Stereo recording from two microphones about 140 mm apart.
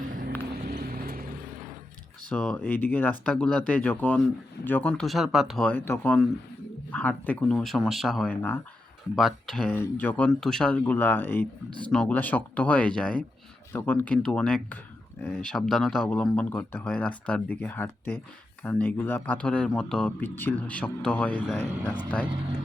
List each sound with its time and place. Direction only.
0.0 s music: 80° right
2.3 s speech: 5° left (ahead or behind)
8.3 s speech: 10° left (ahead or behind)
9.1 s speech: centre (ahead or behind)